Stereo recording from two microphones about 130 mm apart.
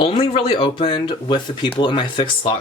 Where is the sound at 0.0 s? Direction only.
45° left (ahead or behind).